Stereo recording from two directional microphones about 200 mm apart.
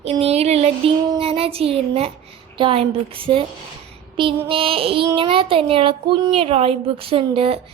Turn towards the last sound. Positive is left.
turn(degrees=-25)  # may be behind; listen again after turning